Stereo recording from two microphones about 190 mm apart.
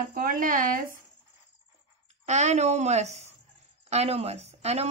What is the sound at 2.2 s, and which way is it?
Speech, 35° right (ahead or behind).